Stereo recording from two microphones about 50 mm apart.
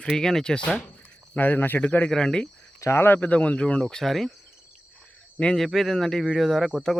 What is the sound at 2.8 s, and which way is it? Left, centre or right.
Speech, left.